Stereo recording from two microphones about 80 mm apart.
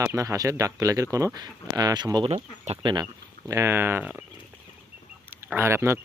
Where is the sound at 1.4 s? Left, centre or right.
Right.